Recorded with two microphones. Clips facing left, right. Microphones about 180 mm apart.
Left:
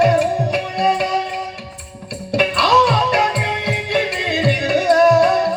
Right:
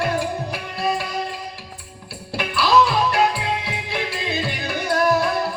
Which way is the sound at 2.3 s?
70° left (ahead or behind).